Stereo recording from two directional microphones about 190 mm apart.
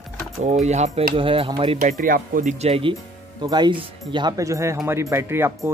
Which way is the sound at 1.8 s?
45° right (ahead or behind).